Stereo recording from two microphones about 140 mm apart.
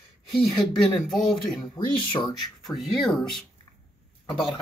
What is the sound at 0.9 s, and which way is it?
Speech, centre (ahead or behind).